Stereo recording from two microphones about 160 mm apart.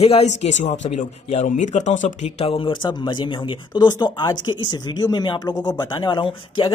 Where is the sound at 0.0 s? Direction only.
40° left (ahead or behind).